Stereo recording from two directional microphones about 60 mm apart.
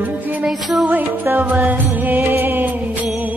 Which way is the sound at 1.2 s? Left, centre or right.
Right.